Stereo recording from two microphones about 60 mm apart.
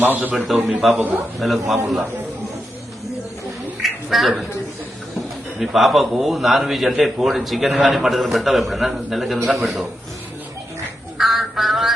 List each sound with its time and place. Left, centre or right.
0.0 s a man's voice: right
0.3 s a man's voice: centre
0.9 s a man's voice: right
1.4 s a man's voice: centre
3.8 s a sound: centre
5.5 s a man's voice: centre
11.2 s a sound: centre